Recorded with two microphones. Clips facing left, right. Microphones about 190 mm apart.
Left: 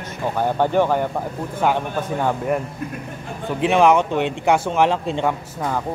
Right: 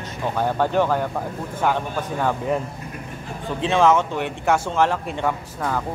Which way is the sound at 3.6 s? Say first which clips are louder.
Left 2 dB; 15° left (ahead or behind).